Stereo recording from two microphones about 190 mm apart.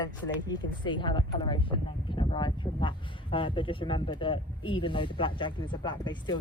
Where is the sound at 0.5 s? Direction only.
25° left (ahead or behind).